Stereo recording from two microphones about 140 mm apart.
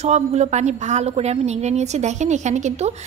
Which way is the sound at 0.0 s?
55° right (ahead or behind).